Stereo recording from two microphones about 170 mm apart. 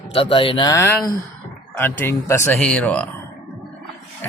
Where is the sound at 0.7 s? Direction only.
15° left (ahead or behind).